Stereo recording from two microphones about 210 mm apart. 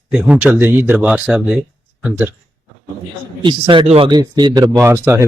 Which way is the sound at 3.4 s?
25° right (ahead or behind).